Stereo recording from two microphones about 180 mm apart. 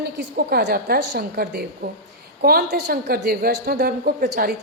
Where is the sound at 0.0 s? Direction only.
65° right (ahead or behind).